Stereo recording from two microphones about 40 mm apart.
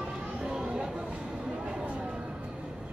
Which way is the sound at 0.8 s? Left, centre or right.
Centre.